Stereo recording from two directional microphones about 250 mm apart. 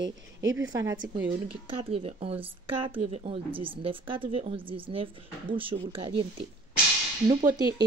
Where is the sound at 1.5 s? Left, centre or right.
Right.